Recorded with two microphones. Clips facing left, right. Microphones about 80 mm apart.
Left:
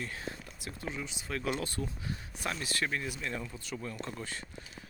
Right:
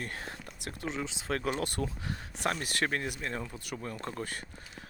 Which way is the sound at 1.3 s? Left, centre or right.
Right.